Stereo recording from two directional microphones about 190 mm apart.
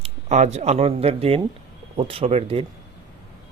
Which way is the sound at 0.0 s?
35° right (ahead or behind).